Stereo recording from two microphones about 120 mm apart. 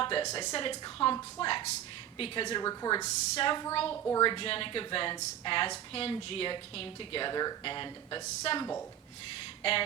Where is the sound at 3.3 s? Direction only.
45° left (ahead or behind).